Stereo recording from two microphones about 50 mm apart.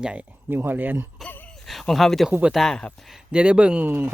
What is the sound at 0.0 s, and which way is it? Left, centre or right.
Speech, right.